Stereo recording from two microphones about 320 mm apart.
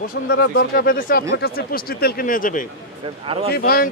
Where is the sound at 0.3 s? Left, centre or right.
Left.